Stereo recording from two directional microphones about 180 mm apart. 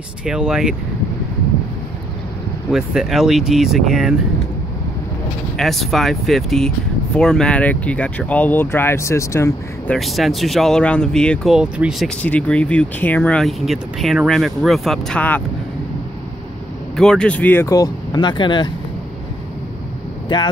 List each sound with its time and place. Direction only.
0.2 s speech: 5° right (ahead or behind)
2.7 s speech: centre (ahead or behind)
5.6 s speech: centre (ahead or behind)
9.9 s speech: centre (ahead or behind)
12.2 s speech: 5° left (ahead or behind)
16.9 s speech: 5° left (ahead or behind); by 18.7 s 25° left (ahead or behind)
20.3 s speech: 25° left (ahead or behind)